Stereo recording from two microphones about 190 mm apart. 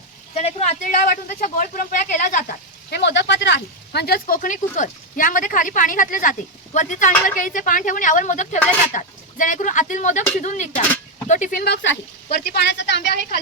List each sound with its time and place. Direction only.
0.3 s speech: 35° left (ahead or behind)
11.6 s a woman's voice: 65° left (ahead or behind)